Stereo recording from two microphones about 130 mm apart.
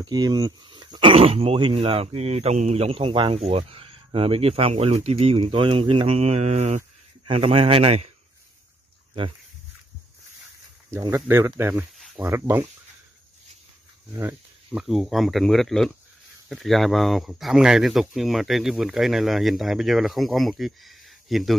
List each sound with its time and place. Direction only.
0.0 s speech: 35° right (ahead or behind); by 6.8 s 60° right (ahead or behind)
7.2 s speech: 50° right (ahead or behind)
10.9 s speech: 20° right (ahead or behind)
14.7 s speech: centre (ahead or behind)